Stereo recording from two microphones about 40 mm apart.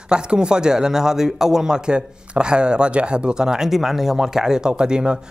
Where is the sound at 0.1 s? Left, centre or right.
Right.